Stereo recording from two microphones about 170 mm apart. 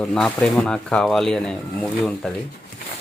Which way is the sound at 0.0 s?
5° left (ahead or behind).